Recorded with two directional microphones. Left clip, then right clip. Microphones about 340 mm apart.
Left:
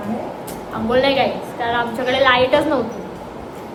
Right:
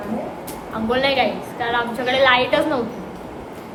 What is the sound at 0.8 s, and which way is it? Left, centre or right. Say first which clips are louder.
A woman's voice: left 2 dB; centre.